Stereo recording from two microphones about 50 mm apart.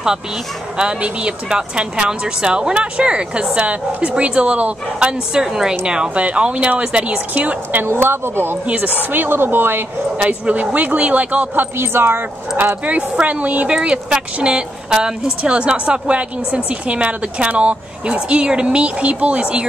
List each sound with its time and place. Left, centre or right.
0.7 s speech: centre
5.3 s a woman's voice: centre
7.3 s speech: right
8.6 s speech: right
10.1 s speech: right
11.8 s speech: right
13.1 s speech: right